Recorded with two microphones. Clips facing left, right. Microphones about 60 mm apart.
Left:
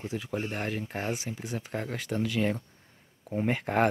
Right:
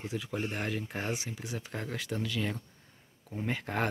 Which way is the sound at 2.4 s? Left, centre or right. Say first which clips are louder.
Left 6 dB; left.